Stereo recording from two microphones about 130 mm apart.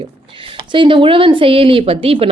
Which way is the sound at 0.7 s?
40° right (ahead or behind).